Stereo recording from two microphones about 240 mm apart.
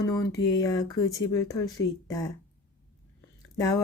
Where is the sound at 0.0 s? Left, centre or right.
Centre.